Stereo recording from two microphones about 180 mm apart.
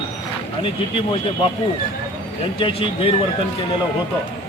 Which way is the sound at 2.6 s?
30° left (ahead or behind).